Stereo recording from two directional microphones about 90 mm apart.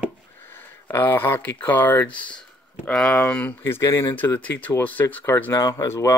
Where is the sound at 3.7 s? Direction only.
25° left (ahead or behind).